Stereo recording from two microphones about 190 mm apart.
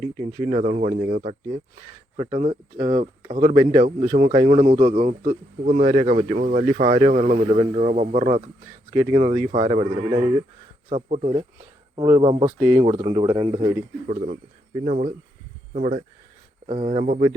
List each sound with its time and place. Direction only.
0.2 s a man's voice: 30° right (ahead or behind)
3.8 s a man's voice: 40° right (ahead or behind)
8.9 s a man's voice: 20° right (ahead or behind)
12.5 s speech: 10° right (ahead or behind)
12.8 s speech: 25° right (ahead or behind)
14.1 s a man's voice: 40° right (ahead or behind)